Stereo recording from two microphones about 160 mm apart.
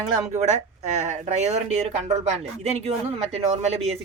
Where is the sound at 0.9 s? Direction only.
50° right (ahead or behind).